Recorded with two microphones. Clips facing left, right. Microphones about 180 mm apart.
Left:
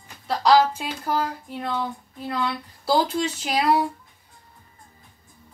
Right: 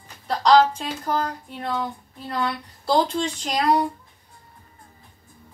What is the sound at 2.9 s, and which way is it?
Speech, 5° left (ahead or behind).